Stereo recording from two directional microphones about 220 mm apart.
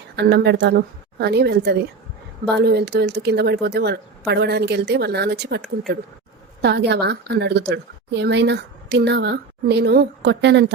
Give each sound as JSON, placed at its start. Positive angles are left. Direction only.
{"t": 0.2, "sound": "a woman's voice", "side_deg": -50}